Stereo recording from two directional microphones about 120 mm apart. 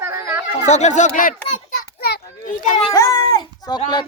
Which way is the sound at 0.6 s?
75° left (ahead or behind).